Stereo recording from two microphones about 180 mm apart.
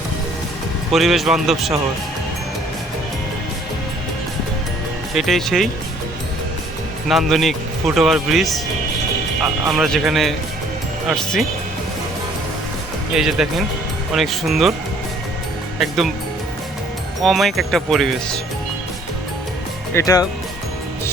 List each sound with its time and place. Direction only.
0.9 s speech: centre (ahead or behind)
5.1 s speech: centre (ahead or behind)
7.1 s speech: centre (ahead or behind)
9.6 s speech: centre (ahead or behind)
13.1 s speech: 5° right (ahead or behind)
17.2 s speech: centre (ahead or behind)
19.9 s speech: 20° left (ahead or behind)